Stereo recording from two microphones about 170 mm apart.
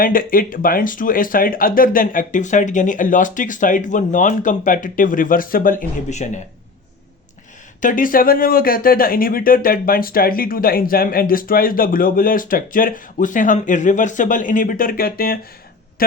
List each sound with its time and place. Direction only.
0.0 s speech: 55° left (ahead or behind)
7.8 s speech: 50° left (ahead or behind)